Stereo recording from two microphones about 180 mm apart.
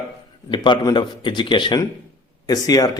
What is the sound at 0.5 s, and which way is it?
A man's voice, 25° left (ahead or behind).